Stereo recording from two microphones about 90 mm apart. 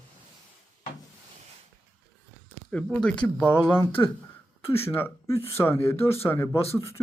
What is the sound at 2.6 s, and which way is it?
Speech, 15° left (ahead or behind).